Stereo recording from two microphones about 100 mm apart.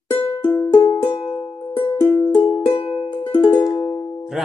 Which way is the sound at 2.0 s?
30° left (ahead or behind).